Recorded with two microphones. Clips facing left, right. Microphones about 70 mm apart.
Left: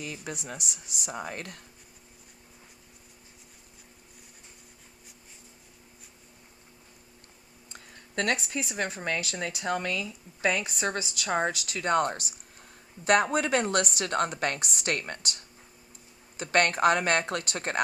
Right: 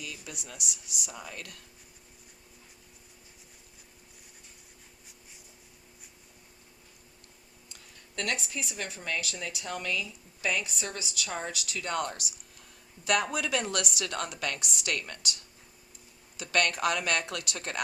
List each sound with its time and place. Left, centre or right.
0.0 s speech: left
7.7 s a sound: left
8.7 s speech: left
16.4 s speech: left